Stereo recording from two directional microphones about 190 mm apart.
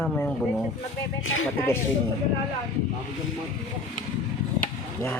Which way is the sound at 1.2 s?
90° left.